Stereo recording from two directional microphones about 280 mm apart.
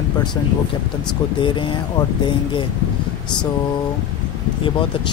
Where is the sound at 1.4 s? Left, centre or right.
Centre.